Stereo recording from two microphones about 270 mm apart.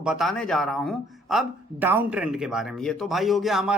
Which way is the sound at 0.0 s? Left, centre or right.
Centre.